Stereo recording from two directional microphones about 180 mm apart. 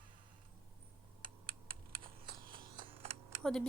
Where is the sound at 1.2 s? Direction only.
55° right (ahead or behind).